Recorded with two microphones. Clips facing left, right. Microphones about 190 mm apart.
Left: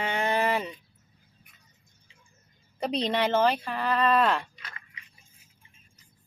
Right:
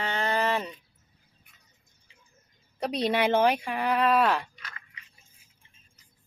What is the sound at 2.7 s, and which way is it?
Speech, centre (ahead or behind).